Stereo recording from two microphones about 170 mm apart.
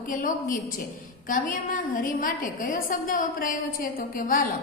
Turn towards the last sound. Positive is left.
turn(degrees=50)  # may be behind; listen again after turning